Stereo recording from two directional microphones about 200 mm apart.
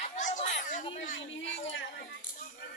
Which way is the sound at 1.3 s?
65° left (ahead or behind).